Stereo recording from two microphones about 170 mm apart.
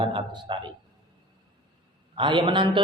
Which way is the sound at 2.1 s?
30° right (ahead or behind).